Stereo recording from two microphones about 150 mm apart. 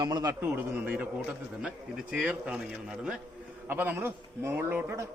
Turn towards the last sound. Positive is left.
turn(degrees=-15)  # may be behind; listen again after turning